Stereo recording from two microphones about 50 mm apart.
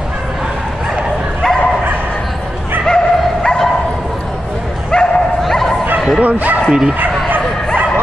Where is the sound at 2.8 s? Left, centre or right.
Centre.